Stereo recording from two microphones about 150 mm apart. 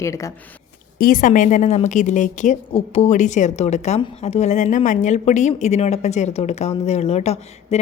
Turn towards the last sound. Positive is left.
turn(degrees=45)  # may be behind; listen again after turning